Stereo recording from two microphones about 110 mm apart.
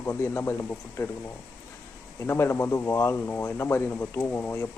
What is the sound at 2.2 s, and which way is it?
Speech, 25° left (ahead or behind).